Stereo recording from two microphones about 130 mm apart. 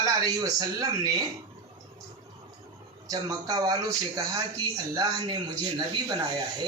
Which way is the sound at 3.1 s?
30° right (ahead or behind).